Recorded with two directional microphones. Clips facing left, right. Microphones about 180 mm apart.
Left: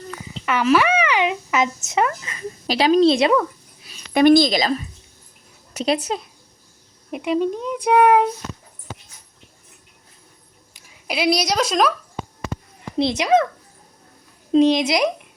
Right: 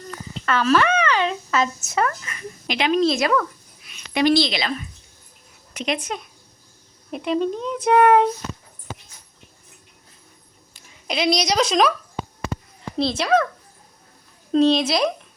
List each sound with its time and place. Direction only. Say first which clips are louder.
0.4 s speech: left 1 dB; 15° left (ahead or behind)
2.6 s a woman's voice: left 5 dB; 35° left (ahead or behind)
3.8 s a sound: left 5 dB; 35° left (ahead or behind)
4.2 s a woman's voice: left 5 dB; 50° left (ahead or behind); by 6.2 s 35° left (ahead or behind)
7.1 s speech: left 1 dB; 10° left (ahead or behind)
10.8 s speech: even; 5° left (ahead or behind)
13.0 s speech: left 2 dB; 20° left (ahead or behind)
14.5 s speech: left 2 dB; 15° left (ahead or behind)